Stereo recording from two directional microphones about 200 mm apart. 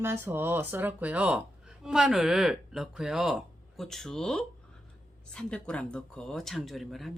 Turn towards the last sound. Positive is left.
turn(degrees=0)  # may be behind; listen again after turning